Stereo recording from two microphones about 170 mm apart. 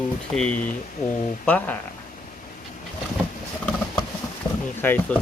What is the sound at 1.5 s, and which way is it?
Speech, 10° left (ahead or behind).